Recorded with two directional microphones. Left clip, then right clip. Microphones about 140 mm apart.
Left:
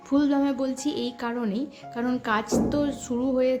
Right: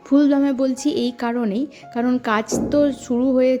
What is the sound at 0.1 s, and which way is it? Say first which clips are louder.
A woman's voice: right 7 dB; 40° right (ahead or behind).